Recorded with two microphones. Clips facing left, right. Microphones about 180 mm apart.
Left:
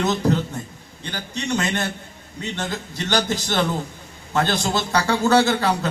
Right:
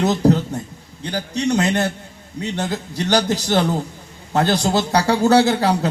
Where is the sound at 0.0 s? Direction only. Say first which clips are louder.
Right 4 dB; 35° right (ahead or behind).